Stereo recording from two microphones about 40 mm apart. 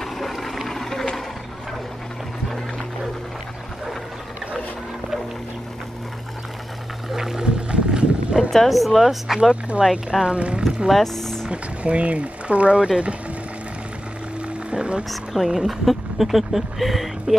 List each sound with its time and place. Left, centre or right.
0.0 s a sound: centre
7.1 s music: centre
7.4 s a sound: right
8.6 s speech: centre
9.4 s speech: right
10.2 s speech: right
10.9 s speech: centre
11.5 s speech: right
14.7 s music: right
15.4 s speech: centre